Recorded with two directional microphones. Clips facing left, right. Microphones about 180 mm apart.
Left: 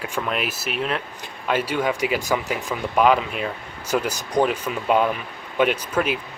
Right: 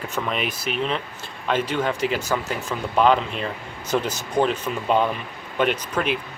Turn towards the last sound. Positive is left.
turn(degrees=5)  # may be behind; listen again after turning